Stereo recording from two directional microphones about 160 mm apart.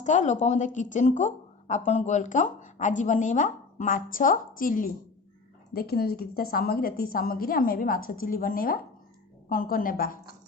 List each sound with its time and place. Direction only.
0.0 s a woman's voice: 50° left (ahead or behind)
5.7 s a woman's voice: 75° left (ahead or behind); by 10.2 s 60° left (ahead or behind)